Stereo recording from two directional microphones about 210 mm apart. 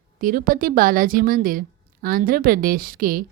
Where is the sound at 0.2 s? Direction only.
40° right (ahead or behind).